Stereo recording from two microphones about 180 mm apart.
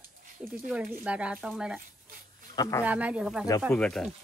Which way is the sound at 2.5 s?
20° left (ahead or behind).